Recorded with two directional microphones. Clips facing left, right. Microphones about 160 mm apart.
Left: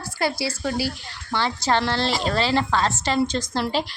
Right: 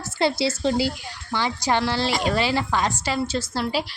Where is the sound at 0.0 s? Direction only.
25° right (ahead or behind).